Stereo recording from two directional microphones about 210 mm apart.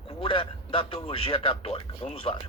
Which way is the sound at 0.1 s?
25° left (ahead or behind).